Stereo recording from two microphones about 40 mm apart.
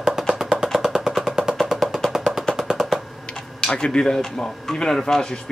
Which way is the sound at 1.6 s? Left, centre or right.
Centre.